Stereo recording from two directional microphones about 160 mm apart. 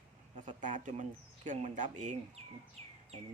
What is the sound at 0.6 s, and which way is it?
Speech, 50° right (ahead or behind).